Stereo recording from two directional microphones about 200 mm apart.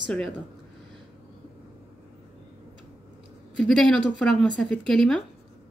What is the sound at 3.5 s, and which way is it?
A woman's voice, centre (ahead or behind).